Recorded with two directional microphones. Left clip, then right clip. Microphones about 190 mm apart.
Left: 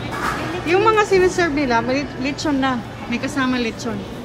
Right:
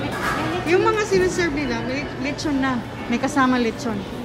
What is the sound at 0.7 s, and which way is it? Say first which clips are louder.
A woman's voice: left 4 dB; 5° left (ahead or behind).